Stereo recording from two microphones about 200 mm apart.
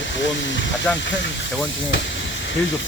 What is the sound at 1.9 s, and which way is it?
Steam, 65° left (ahead or behind).